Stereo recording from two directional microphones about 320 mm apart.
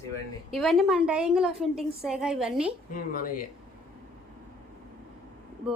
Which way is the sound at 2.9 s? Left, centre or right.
Left.